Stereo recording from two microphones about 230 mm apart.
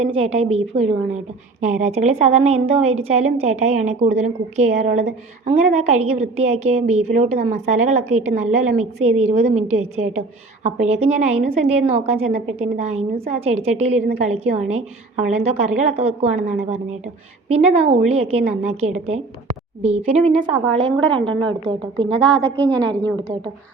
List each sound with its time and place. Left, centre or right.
0.0 s a woman's voice: right
22.1 s a woman's voice: centre